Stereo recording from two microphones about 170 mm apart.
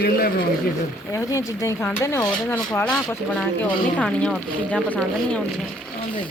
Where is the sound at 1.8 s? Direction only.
15° left (ahead or behind).